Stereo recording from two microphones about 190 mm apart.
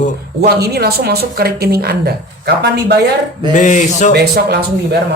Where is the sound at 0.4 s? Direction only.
55° right (ahead or behind).